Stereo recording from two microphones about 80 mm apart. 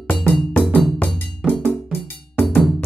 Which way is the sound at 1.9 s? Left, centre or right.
Left.